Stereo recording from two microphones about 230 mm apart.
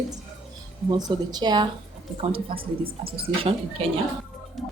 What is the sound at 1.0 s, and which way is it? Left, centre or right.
A woman's voice, centre.